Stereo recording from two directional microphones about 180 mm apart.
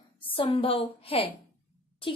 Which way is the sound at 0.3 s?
30° left (ahead or behind).